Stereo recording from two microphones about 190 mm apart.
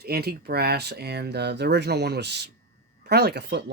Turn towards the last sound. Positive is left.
turn(degrees=-60)  # may be behind; listen again after turning